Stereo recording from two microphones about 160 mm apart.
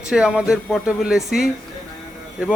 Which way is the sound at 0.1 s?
5° right (ahead or behind).